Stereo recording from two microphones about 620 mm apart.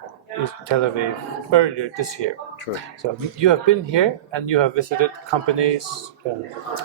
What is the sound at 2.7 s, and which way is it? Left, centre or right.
Speech, left.